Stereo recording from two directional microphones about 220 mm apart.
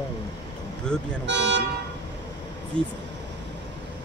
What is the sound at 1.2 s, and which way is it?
Speech, 55° right (ahead or behind).